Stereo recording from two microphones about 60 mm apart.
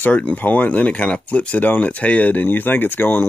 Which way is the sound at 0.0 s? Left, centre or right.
Left.